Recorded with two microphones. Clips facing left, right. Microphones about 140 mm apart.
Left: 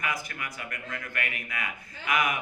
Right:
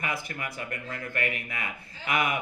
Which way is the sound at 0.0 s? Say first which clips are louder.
Right 1 dB; 30° right (ahead or behind).